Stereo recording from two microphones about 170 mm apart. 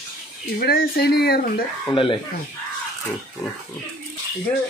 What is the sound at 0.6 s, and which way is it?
Speech, 65° left (ahead or behind).